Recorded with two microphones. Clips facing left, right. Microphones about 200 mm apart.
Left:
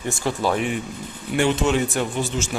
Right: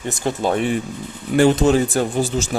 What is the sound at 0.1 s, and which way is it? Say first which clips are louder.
A man's voice: right 2 dB; 20° right (ahead or behind).